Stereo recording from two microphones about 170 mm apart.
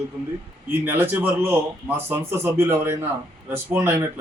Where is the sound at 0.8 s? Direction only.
10° right (ahead or behind).